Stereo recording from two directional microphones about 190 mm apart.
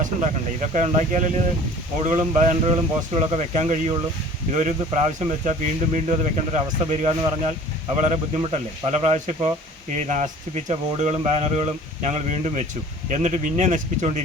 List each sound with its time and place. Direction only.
0.0 s speech: 40° right (ahead or behind)
5.2 s speech: 35° right (ahead or behind)